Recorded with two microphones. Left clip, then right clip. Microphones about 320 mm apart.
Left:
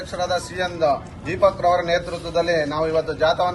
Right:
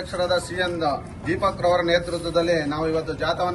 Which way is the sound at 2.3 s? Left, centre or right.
Centre.